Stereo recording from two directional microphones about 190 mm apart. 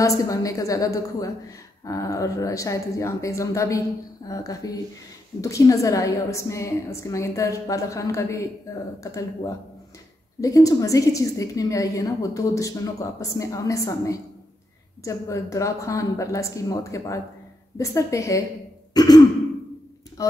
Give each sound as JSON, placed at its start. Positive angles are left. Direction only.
{"t": 0.0, "sound": "a woman's voice", "side_deg": 15}